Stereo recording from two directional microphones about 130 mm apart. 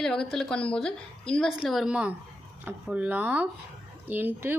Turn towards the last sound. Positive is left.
turn(degrees=-15)  # may be behind; listen again after turning